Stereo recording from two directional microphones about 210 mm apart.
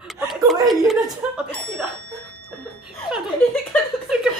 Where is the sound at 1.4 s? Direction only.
Centre (ahead or behind).